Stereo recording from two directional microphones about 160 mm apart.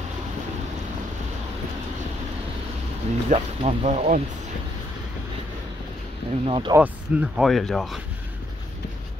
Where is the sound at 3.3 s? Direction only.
40° right (ahead or behind).